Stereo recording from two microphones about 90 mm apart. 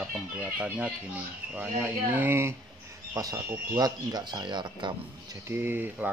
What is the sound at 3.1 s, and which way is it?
Speech, 45° right (ahead or behind).